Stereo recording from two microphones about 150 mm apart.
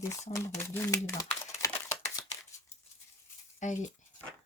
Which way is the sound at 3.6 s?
55° left (ahead or behind).